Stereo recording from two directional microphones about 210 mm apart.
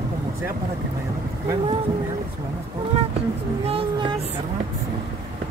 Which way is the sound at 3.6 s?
30° right (ahead or behind).